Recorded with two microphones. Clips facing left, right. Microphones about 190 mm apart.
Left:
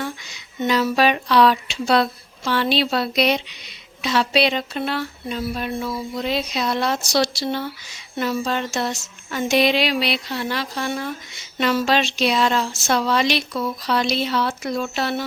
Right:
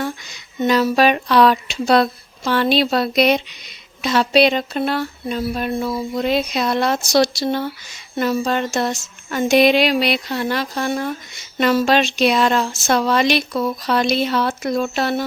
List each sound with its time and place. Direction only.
0.0 s speech: 45° right (ahead or behind)